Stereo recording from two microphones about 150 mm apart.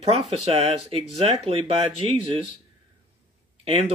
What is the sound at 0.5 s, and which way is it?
Speech, 45° right (ahead or behind).